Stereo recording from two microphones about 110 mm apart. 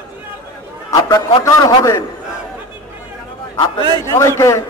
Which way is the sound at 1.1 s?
30° left (ahead or behind).